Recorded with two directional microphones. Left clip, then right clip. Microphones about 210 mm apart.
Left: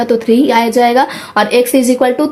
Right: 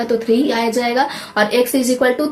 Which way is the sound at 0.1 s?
45° left (ahead or behind).